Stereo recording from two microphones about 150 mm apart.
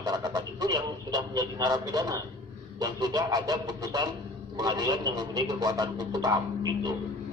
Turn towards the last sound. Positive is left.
turn(degrees=-25)  # may be behind; listen again after turning